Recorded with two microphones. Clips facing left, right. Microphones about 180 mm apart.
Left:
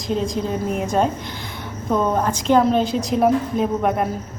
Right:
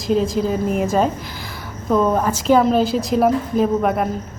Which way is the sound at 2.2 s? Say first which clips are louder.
Right 1 dB; 5° right (ahead or behind).